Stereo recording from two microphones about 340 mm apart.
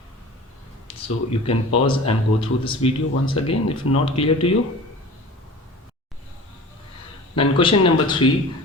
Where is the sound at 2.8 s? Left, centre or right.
Centre.